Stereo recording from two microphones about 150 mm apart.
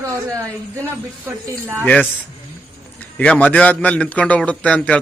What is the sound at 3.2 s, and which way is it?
A man's voice, 10° left (ahead or behind).